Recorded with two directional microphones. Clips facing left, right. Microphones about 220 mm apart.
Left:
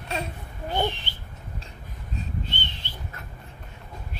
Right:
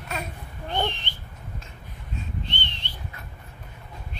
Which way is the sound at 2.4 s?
5° left (ahead or behind).